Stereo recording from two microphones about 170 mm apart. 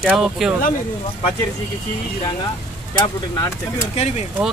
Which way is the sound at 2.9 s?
20° left (ahead or behind).